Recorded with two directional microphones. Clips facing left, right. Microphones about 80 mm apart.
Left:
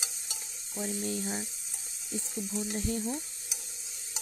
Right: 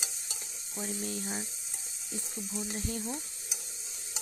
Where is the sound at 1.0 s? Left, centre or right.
Left.